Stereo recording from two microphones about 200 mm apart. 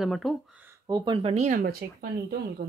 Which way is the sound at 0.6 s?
15° right (ahead or behind).